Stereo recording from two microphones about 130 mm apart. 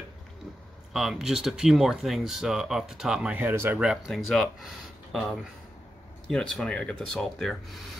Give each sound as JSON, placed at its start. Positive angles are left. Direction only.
{"t": 0.9, "sound": "speech", "side_deg": 0}
{"t": 3.8, "sound": "speech", "side_deg": -5}